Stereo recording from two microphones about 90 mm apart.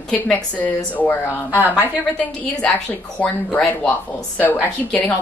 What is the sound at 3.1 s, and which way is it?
Speech, 15° left (ahead or behind).